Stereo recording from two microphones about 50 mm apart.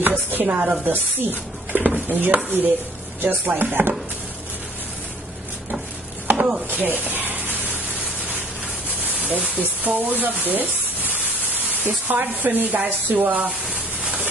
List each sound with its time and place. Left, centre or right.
0.0 s chopping: right
1.2 s speech: right
6.3 s chopping: centre
6.7 s spray: right
10.4 s a sound: right
11.9 s speech: right
13.1 s a sound: right